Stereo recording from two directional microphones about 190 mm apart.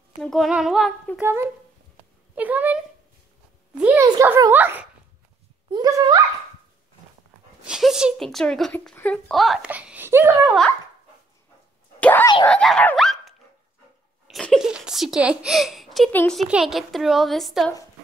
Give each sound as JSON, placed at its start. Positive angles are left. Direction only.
{"t": 0.2, "sound": "a woman's voice", "side_deg": 0}
{"t": 1.1, "sound": "a child's voice", "side_deg": -10}
{"t": 7.6, "sound": "a woman's voice", "side_deg": -5}
{"t": 12.0, "sound": "a woman's voice", "side_deg": 10}